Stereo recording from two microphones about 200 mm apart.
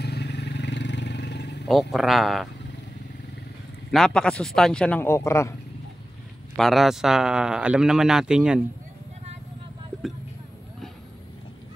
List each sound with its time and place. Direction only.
0.0 s vehicle: 55° left (ahead or behind)
1.7 s a man's voice: centre (ahead or behind)
3.9 s a man's voice: centre (ahead or behind)
6.5 s a man's voice: centre (ahead or behind)